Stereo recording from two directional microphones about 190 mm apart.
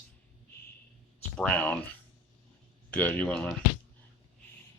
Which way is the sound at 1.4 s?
5° left (ahead or behind).